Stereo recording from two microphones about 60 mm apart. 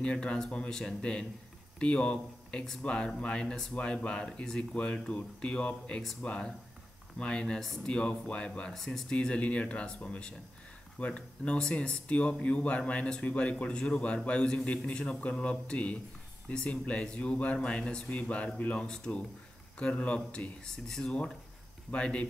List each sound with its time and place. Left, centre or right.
0.0 s speech: centre
8.7 s speech: centre
9.1 s speech: centre